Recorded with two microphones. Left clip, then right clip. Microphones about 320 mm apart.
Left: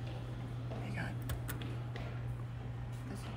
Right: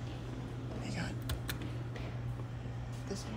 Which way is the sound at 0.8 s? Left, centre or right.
Centre.